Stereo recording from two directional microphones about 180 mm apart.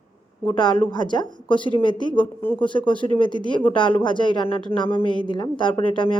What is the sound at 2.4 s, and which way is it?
Speech, 10° left (ahead or behind).